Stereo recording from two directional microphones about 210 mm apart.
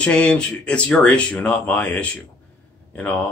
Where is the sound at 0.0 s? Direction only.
5° left (ahead or behind).